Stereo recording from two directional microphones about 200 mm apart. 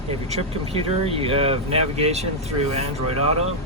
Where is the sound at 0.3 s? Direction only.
30° right (ahead or behind).